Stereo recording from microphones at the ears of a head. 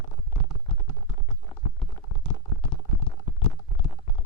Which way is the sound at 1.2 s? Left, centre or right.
Left.